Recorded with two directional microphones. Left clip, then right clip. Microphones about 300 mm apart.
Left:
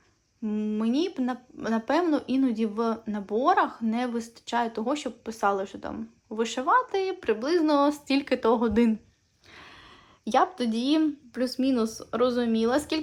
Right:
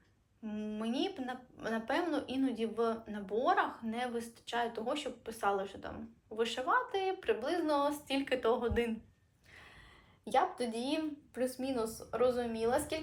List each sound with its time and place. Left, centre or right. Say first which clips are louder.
0.4 s speech: left 10 dB; centre
10.9 s speech: left 11 dB; left